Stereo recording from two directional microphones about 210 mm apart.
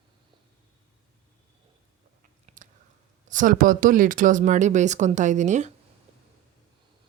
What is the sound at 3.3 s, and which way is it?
Speech, 40° right (ahead or behind).